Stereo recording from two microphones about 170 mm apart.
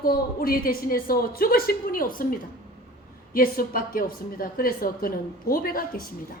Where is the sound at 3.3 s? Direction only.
60° left (ahead or behind).